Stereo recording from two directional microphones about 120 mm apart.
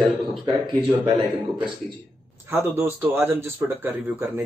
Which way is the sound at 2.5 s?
20° right (ahead or behind).